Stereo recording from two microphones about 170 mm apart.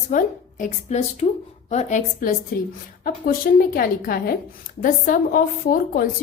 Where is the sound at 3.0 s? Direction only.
60° left (ahead or behind).